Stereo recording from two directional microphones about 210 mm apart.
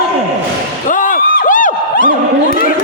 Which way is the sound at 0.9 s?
40° left (ahead or behind).